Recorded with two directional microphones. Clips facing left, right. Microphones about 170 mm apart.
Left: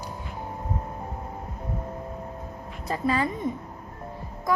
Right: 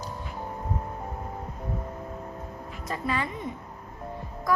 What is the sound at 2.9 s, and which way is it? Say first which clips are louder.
Music: left 5 dB; 35° left (ahead or behind).